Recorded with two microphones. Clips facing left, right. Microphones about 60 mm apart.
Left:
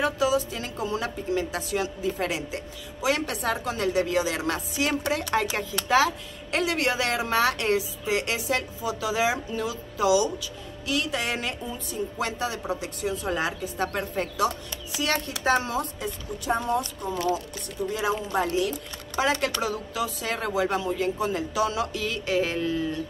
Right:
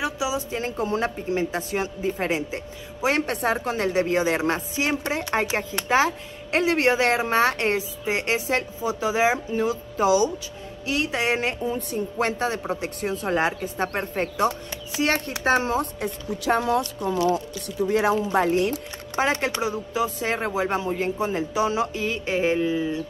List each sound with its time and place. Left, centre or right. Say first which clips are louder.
0.0 s speech: left 3 dB; centre
0.4 s a woman's voice: right 4 dB; right
11.6 s a woman's voice: right 5 dB; right
16.0 s speech: right 4 dB; right
19.1 s speech: right 2 dB; right